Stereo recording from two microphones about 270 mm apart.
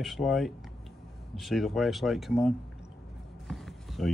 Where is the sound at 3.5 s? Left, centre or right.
Centre.